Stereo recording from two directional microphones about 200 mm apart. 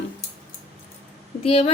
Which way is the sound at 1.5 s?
30° left (ahead or behind).